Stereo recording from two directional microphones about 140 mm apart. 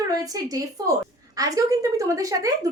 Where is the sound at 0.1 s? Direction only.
25° right (ahead or behind).